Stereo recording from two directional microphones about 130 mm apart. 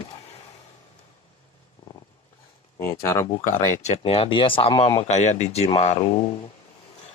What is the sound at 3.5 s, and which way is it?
Speech, 65° left (ahead or behind).